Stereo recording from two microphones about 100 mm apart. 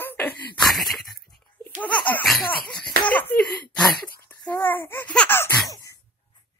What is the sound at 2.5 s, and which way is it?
Speech, 15° left (ahead or behind).